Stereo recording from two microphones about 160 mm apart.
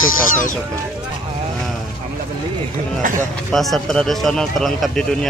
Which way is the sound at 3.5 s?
Centre (ahead or behind).